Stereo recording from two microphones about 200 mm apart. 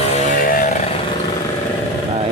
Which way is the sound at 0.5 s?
40° left (ahead or behind).